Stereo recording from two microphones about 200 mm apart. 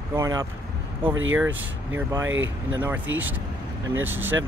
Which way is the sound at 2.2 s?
75° right (ahead or behind).